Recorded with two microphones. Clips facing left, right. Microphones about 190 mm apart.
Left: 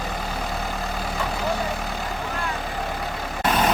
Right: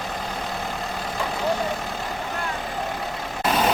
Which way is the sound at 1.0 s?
Centre (ahead or behind).